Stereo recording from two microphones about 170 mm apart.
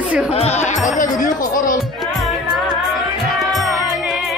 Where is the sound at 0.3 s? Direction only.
40° left (ahead or behind).